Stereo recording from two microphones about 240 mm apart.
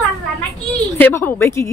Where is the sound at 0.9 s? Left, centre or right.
Centre.